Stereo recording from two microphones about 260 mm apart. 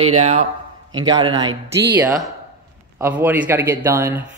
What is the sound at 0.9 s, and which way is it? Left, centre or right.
Speech, centre.